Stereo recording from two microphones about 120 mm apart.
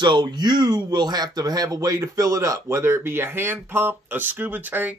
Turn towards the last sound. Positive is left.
turn(degrees=-15)  # may be behind; listen again after turning